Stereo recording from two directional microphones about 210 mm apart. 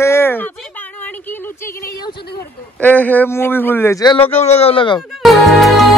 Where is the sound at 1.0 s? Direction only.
10° left (ahead or behind).